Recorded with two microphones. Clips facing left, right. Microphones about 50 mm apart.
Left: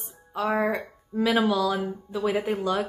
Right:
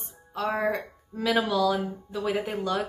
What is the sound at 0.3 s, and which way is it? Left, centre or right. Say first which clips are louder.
A woman's voice: left 2 dB; centre.